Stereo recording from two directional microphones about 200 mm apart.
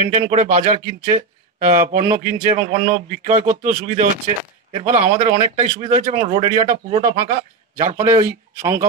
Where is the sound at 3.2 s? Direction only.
40° right (ahead or behind).